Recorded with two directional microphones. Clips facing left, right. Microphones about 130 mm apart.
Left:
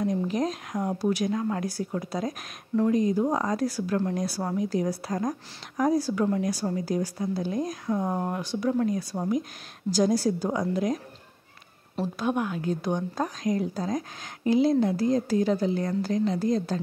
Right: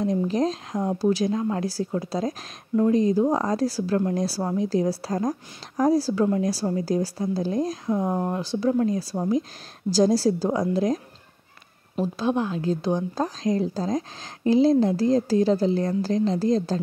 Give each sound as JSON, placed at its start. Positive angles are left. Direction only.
{"t": 0.0, "sound": "a woman's voice", "side_deg": -30}
{"t": 8.0, "sound": "speech", "side_deg": -10}
{"t": 8.3, "sound": "a woman's voice", "side_deg": -30}
{"t": 12.2, "sound": "a woman's voice", "side_deg": -25}